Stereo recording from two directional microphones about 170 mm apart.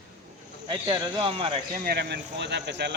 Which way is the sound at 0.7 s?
25° right (ahead or behind).